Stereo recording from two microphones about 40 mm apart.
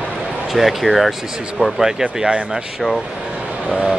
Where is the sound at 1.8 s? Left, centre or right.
Centre.